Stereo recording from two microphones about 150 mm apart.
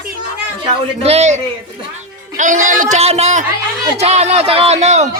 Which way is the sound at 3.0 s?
45° right (ahead or behind).